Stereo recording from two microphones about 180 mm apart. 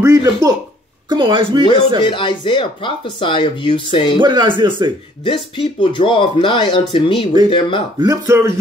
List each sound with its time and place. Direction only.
0.0 s speech: 20° right (ahead or behind)
2.0 s speech: 25° left (ahead or behind)
4.2 s speech: 25° right (ahead or behind)
5.2 s speech: 25° left (ahead or behind)
8.0 s speech: 20° right (ahead or behind)